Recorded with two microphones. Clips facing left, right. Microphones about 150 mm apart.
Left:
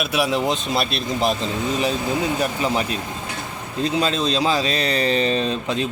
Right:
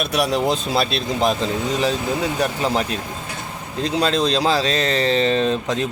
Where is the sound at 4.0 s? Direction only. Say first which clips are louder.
Right 4 dB; 35° right (ahead or behind).